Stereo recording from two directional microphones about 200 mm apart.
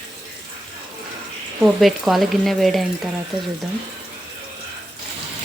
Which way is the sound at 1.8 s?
Centre (ahead or behind).